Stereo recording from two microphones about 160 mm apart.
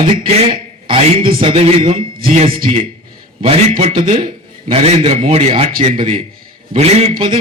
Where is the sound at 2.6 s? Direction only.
55° right (ahead or behind).